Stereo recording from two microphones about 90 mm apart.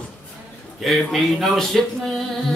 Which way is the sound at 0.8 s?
Centre (ahead or behind).